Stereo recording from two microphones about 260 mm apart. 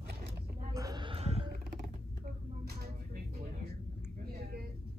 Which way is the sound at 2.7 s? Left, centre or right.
Right.